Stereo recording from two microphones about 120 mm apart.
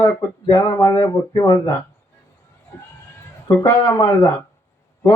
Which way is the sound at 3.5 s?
25° left (ahead or behind).